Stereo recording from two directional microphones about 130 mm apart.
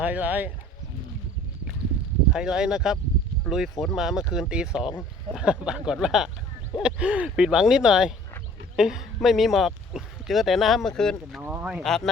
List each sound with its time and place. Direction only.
0.0 s speech: 10° right (ahead or behind)
2.3 s speech: 5° right (ahead or behind)
11.3 s speech: 10° right (ahead or behind)
11.8 s speech: centre (ahead or behind)